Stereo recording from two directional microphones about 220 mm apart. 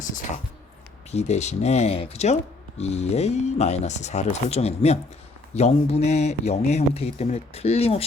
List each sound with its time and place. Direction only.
1.1 s speech: 30° left (ahead or behind)